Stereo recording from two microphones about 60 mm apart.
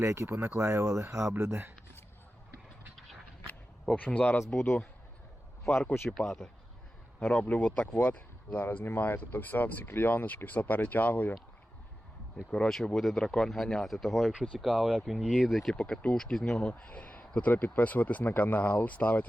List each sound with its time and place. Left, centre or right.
0.0 s speech: right
3.9 s speech: left
6.1 s speech: centre
7.4 s speech: left
12.5 s speech: centre
15.7 s speech: centre